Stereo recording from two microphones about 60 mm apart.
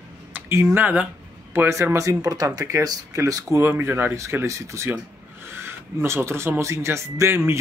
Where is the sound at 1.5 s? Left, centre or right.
Right.